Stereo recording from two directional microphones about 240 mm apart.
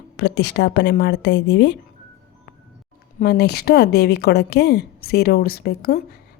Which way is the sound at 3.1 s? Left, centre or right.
Left.